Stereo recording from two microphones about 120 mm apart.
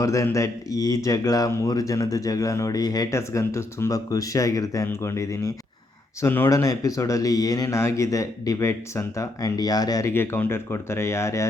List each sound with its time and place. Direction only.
0.0 s speech: 25° left (ahead or behind)
10.1 s speech: 20° left (ahead or behind)